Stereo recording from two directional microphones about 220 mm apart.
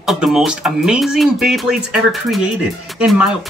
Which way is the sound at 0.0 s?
Centre (ahead or behind).